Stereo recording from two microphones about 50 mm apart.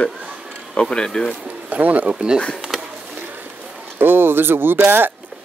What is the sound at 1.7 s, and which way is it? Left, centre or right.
Speech, right.